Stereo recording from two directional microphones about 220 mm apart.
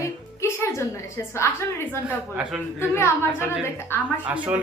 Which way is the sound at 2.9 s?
10° left (ahead or behind).